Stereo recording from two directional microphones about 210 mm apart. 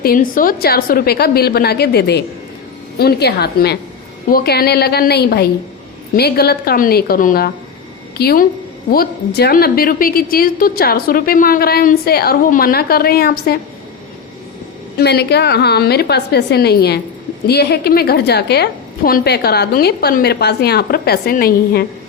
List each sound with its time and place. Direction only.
0.0 s a woman's voice: 40° left (ahead or behind)
14.9 s a woman's voice: 50° left (ahead or behind)